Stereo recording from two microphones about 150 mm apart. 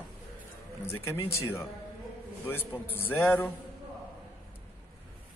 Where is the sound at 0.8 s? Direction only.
15° left (ahead or behind).